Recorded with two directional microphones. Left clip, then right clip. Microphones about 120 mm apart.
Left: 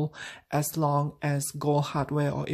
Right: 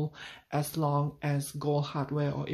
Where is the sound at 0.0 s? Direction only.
45° left (ahead or behind).